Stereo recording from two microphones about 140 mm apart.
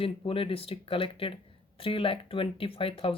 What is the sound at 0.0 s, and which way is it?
Speech, 40° left (ahead or behind).